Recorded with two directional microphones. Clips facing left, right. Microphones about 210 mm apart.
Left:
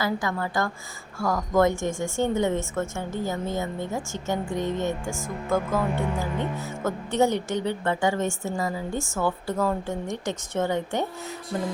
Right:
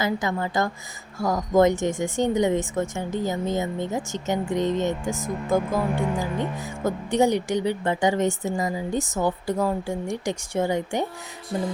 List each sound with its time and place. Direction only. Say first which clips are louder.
0.0 s a woman's voice: right 2 dB; 20° right (ahead or behind)